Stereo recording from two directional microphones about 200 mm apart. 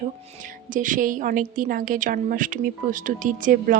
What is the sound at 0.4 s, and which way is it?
A woman's voice, 40° right (ahead or behind).